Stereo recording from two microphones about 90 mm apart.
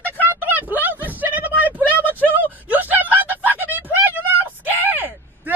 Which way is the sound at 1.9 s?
20° left (ahead or behind).